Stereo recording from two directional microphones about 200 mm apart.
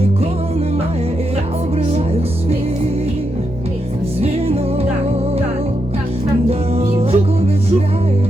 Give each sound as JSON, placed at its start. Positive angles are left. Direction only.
{"t": 6.5, "sound": "music", "side_deg": -30}